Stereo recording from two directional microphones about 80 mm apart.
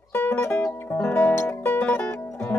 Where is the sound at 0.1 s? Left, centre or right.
Left.